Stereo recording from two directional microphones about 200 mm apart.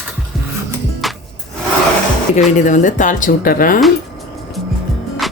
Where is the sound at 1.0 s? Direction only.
Centre (ahead or behind).